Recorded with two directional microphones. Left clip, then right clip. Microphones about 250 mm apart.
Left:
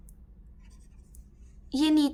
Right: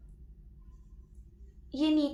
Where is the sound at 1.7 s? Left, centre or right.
Left.